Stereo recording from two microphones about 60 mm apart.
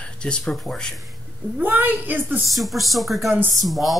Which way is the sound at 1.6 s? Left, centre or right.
Right.